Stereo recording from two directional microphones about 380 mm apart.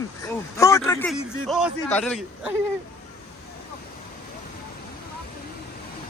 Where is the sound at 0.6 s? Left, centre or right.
Centre.